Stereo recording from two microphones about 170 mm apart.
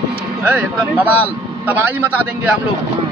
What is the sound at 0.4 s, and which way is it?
Speech, 10° right (ahead or behind).